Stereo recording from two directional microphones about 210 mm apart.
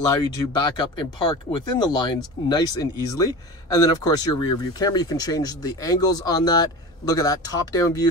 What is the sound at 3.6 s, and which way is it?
Speech, 15° left (ahead or behind).